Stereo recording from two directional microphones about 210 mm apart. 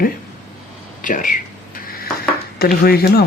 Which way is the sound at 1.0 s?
40° left (ahead or behind).